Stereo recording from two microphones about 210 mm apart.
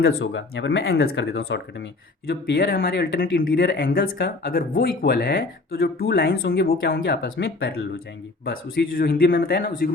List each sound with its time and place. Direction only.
0.0 s speech: 55° left (ahead or behind)